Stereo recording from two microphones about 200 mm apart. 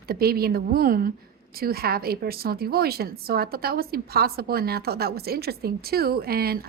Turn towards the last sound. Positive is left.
turn(degrees=-50)  # may be behind; listen again after turning